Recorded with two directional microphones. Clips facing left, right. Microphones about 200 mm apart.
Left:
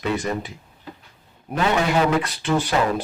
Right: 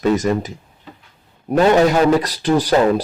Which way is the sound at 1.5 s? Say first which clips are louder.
Right 8 dB; 40° right (ahead or behind).